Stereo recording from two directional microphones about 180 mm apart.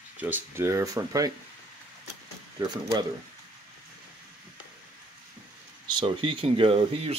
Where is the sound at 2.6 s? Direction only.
20° right (ahead or behind).